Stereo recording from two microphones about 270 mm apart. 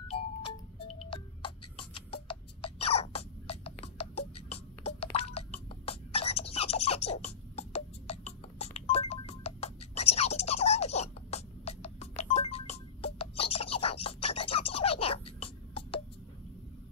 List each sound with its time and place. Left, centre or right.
0.8 s music: centre